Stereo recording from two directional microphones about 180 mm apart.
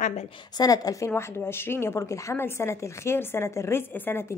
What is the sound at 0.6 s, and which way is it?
A woman's voice, 20° left (ahead or behind).